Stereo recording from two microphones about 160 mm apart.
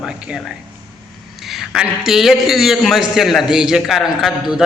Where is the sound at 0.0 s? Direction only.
5° right (ahead or behind).